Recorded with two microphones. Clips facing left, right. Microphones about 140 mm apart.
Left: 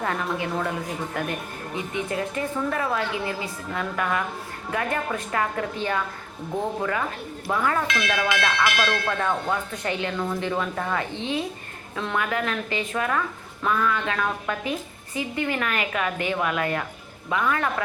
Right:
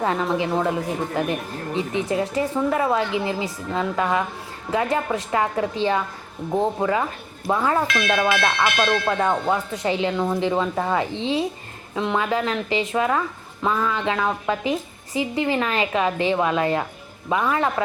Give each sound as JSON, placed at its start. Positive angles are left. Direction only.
{"t": 0.0, "sound": "speech", "side_deg": -25}
{"t": 9.0, "sound": "speech", "side_deg": -25}